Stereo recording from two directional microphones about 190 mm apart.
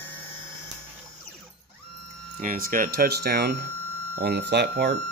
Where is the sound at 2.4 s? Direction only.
45° right (ahead or behind).